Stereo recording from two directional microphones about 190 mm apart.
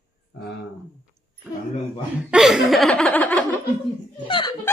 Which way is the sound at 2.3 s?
5° right (ahead or behind).